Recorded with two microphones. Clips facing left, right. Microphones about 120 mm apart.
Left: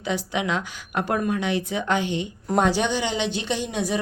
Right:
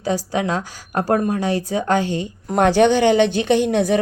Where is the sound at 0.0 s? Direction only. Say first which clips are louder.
Right 5 dB; 35° right (ahead or behind).